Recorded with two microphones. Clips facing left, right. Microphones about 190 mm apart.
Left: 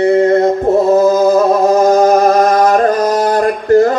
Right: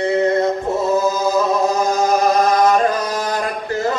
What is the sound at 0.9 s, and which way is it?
Chant, 55° left (ahead or behind).